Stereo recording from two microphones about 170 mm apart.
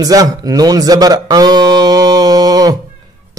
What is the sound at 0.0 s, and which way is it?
A man's voice, 20° right (ahead or behind).